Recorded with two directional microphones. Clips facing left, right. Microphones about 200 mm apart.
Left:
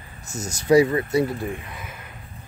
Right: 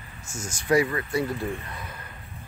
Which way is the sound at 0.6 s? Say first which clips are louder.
Left 6 dB; 25° left (ahead or behind).